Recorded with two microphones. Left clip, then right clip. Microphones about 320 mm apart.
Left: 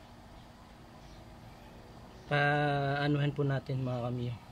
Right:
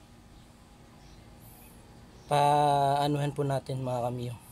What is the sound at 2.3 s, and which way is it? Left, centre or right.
Speech, centre.